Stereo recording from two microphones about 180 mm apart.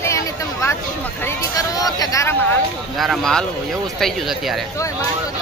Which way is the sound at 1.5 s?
20° left (ahead or behind).